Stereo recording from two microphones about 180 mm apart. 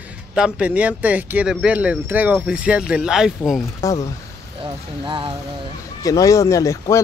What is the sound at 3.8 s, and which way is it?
Speech, 15° left (ahead or behind).